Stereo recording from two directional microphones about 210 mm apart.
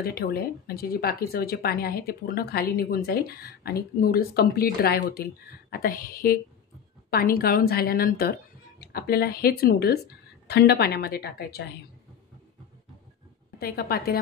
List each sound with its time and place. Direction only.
0.0 s speech: 45° left (ahead or behind)
13.6 s speech: 45° left (ahead or behind)